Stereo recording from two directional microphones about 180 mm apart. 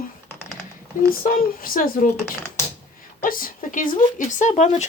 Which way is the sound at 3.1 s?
50° left (ahead or behind).